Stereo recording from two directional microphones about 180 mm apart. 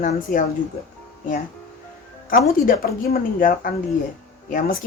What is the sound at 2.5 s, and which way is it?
Speech, 50° left (ahead or behind).